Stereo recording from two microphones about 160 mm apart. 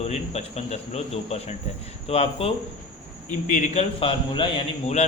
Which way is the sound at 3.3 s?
50° left (ahead or behind).